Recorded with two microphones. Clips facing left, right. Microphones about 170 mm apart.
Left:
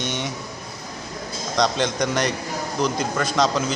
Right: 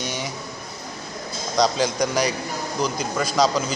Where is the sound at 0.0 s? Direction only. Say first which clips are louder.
Left 2 dB; centre (ahead or behind).